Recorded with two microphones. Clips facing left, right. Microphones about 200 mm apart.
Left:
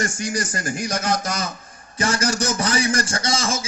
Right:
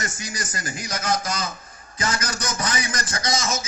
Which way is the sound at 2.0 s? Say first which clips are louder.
Left 6 dB; 30° left (ahead or behind).